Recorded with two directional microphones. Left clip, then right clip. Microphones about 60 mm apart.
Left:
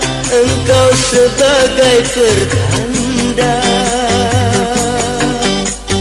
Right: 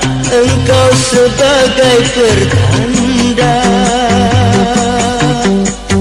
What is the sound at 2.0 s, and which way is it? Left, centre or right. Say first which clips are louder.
Music: right 2 dB; right.